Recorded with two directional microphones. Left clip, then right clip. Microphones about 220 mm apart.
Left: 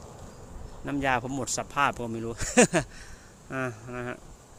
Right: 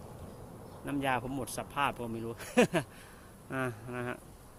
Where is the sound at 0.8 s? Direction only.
20° left (ahead or behind).